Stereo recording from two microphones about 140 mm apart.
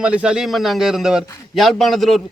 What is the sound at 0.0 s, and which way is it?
A man's voice, 10° right (ahead or behind).